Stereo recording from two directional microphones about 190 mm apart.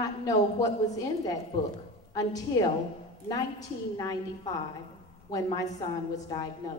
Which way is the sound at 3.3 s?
20° left (ahead or behind).